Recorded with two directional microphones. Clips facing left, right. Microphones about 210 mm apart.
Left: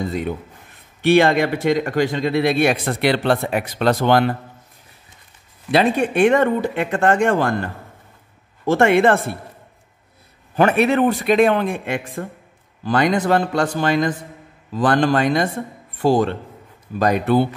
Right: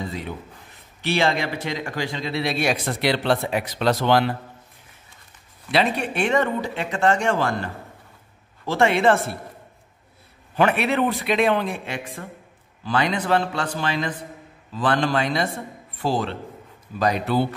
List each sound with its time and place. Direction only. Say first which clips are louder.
0.0 s a man's voice: left 7 dB; 50° left (ahead or behind)
5.7 s a man's voice: left 5 dB; 50° left (ahead or behind)
10.5 s a man's voice: left 5 dB; 45° left (ahead or behind)